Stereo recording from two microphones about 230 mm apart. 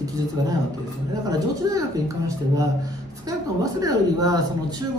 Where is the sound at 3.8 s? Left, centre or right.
Centre.